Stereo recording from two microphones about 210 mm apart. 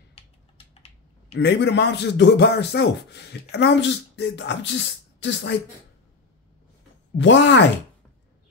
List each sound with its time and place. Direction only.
0.7 s typing: 30° left (ahead or behind)
1.4 s speech: 55° left (ahead or behind)
7.2 s speech: 60° left (ahead or behind)